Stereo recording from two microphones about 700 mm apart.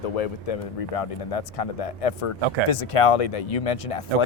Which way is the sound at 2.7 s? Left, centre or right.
Left.